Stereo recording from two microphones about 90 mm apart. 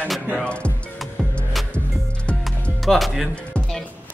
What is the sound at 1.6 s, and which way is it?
Music, centre (ahead or behind).